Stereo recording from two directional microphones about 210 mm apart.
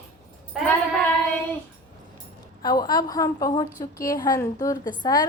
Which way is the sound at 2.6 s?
20° left (ahead or behind).